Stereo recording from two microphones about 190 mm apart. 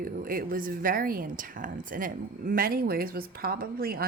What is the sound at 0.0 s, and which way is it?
A woman's voice, 50° right (ahead or behind).